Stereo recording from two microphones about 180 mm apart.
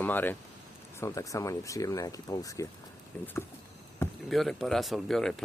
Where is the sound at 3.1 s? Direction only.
5° left (ahead or behind).